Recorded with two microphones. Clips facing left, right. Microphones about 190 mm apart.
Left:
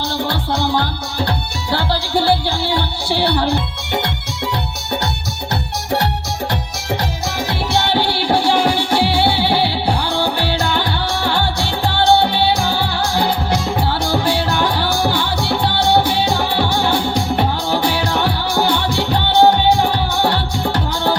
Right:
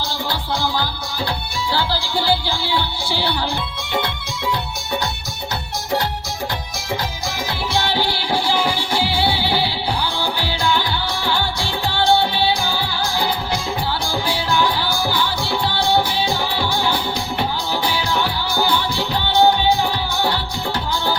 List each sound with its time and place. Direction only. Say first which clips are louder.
0.3 s music: left 3 dB; 65° left (ahead or behind)
7.7 s music: left 3 dB; 70° left (ahead or behind)